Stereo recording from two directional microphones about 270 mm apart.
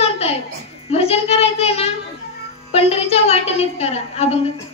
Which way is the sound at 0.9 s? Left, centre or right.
Left.